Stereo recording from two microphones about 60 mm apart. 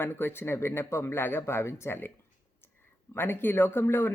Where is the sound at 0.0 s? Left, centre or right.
Left.